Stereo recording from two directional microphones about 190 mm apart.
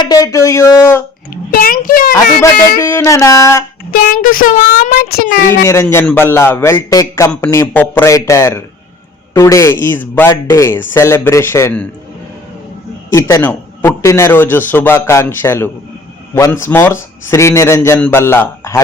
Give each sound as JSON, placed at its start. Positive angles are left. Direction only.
{"t": 0.0, "sound": "speech", "side_deg": 20}
{"t": 1.5, "sound": "a child's voice", "side_deg": 50}
{"t": 2.8, "sound": "a man's voice", "side_deg": 15}
{"t": 3.9, "sound": "speech", "side_deg": 50}
{"t": 5.6, "sound": "a man's voice", "side_deg": 15}
{"t": 13.1, "sound": "a man's voice", "side_deg": 15}